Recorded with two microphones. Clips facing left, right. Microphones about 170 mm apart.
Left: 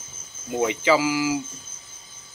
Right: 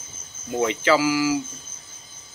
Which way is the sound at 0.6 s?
15° left (ahead or behind).